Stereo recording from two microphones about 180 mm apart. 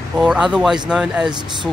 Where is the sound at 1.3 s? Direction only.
25° right (ahead or behind).